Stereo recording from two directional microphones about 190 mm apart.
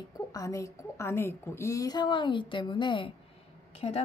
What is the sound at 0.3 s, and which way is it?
A woman's voice, 15° left (ahead or behind).